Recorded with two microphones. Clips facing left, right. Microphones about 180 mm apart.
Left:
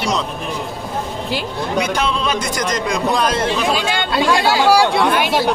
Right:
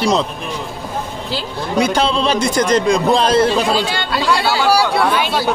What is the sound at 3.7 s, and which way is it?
Speech, 15° left (ahead or behind).